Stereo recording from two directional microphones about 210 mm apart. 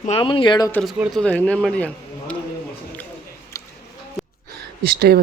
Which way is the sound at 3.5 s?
15° left (ahead or behind).